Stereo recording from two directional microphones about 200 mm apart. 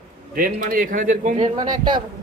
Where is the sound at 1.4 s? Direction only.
25° right (ahead or behind).